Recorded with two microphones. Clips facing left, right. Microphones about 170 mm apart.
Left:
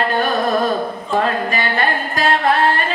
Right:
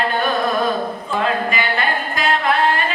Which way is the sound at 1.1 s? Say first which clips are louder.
Left 2 dB; 40° left (ahead or behind).